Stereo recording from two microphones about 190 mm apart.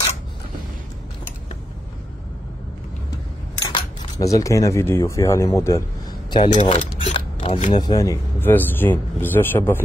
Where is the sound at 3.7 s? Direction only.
15° left (ahead or behind).